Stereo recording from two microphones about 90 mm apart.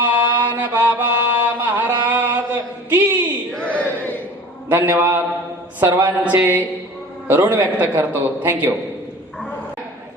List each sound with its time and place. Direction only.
0.3 s mantra: 20° right (ahead or behind)
3.5 s a sound: 15° left (ahead or behind)
4.7 s a man's voice: 20° right (ahead or behind)